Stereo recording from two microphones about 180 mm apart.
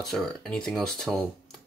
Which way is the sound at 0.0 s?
Centre (ahead or behind).